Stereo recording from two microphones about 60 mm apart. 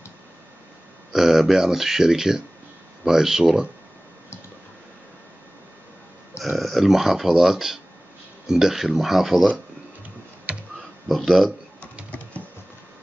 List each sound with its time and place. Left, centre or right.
1.1 s speech: centre
6.4 s speech: centre
11.1 s speech: centre
12.1 s a sound: left